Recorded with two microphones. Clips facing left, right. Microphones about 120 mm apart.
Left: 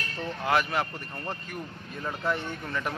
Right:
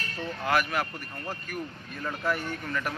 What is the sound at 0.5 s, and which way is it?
Speech, 25° left (ahead or behind).